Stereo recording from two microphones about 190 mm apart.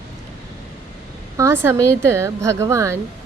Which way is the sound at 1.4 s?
10° right (ahead or behind).